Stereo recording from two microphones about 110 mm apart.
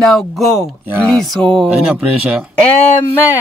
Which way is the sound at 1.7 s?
10° right (ahead or behind).